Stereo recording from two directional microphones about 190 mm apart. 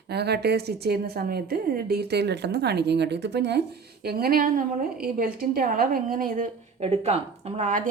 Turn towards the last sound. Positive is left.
turn(degrees=-40)  # may be behind; listen again after turning